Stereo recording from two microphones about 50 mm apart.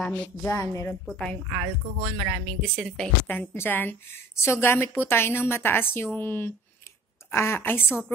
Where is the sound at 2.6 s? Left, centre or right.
Centre.